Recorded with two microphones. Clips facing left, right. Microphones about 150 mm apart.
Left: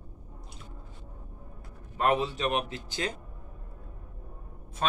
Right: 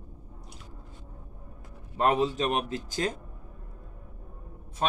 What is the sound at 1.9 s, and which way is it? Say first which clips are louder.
A man's voice: right 2 dB; 35° right (ahead or behind).